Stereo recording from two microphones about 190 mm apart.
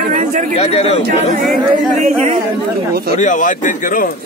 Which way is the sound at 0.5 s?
35° left (ahead or behind).